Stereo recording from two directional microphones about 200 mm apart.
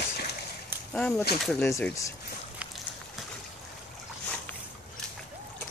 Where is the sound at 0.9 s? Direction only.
5° left (ahead or behind).